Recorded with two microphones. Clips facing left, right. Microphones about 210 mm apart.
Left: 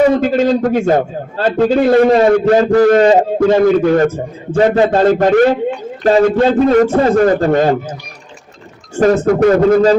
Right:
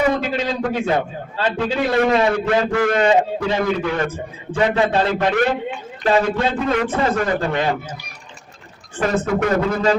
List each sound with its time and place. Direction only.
0.2 s a man's voice: 45° left (ahead or behind)
9.0 s speech: 40° left (ahead or behind)